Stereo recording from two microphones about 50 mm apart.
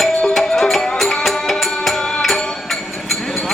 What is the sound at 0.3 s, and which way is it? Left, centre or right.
Music, centre.